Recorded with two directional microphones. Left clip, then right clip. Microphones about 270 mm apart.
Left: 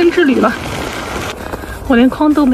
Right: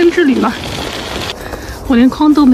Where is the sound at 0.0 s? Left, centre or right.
Centre.